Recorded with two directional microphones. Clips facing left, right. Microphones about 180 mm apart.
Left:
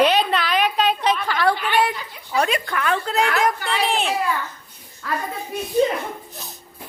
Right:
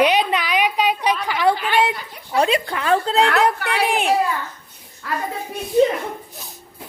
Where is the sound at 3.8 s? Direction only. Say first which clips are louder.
Right 2 dB; 10° right (ahead or behind).